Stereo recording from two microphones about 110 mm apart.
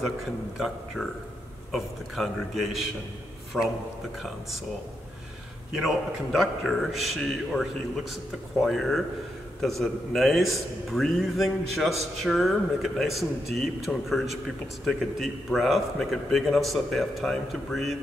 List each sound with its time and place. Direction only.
1.7 s a man's voice: centre (ahead or behind)
5.7 s a man's voice: centre (ahead or behind)